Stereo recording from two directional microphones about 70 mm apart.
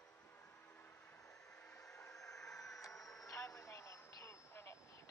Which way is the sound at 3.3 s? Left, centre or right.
Left.